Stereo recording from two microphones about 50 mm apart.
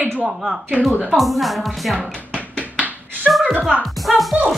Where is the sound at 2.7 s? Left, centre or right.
Right.